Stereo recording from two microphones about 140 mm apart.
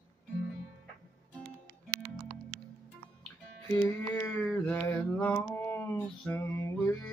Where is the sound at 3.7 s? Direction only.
15° left (ahead or behind).